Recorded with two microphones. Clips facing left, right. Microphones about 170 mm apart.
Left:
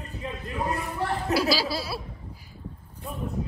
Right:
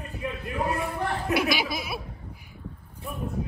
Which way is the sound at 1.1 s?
35° left (ahead or behind).